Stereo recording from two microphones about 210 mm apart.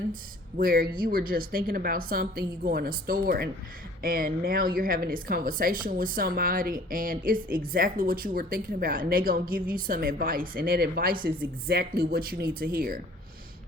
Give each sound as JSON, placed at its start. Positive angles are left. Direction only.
{"t": 0.1, "sound": "a woman's voice", "side_deg": -40}